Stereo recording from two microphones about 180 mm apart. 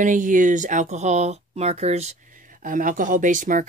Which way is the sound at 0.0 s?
45° right (ahead or behind).